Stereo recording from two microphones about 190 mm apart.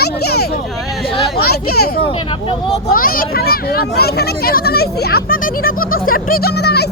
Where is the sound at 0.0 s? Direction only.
55° left (ahead or behind).